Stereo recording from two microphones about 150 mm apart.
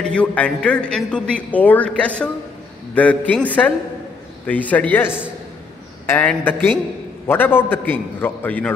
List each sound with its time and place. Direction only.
0.0 s speech: 10° left (ahead or behind)